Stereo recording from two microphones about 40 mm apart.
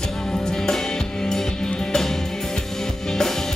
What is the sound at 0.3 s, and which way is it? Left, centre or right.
Music, centre.